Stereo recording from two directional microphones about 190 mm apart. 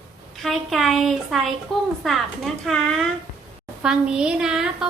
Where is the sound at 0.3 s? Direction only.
Centre (ahead or behind).